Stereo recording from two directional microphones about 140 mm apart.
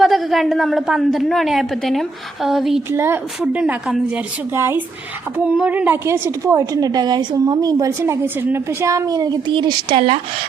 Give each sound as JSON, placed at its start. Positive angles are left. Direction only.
{"t": 0.0, "sound": "a woman's voice", "side_deg": 0}
{"t": 2.9, "sound": "a woman's voice", "side_deg": -15}
{"t": 4.5, "sound": "a woman's voice", "side_deg": -15}